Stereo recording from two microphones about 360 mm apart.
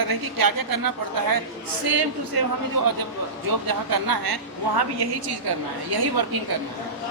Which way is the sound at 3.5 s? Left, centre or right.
Right.